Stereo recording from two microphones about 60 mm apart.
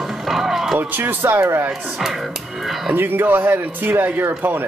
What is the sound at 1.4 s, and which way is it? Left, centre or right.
Speech, right.